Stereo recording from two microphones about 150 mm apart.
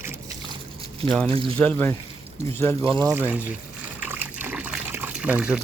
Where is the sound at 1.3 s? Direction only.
40° right (ahead or behind).